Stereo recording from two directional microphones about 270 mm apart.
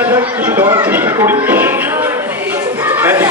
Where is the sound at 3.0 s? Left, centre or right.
Centre.